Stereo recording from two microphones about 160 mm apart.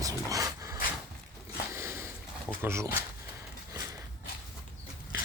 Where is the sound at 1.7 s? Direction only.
15° right (ahead or behind).